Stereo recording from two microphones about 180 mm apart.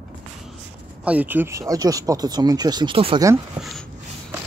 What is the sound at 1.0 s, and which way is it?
Speech, 10° right (ahead or behind).